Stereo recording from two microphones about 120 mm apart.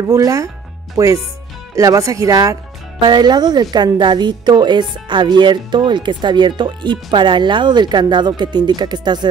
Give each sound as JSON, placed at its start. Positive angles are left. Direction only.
{"t": 0.1, "sound": "speech", "side_deg": -30}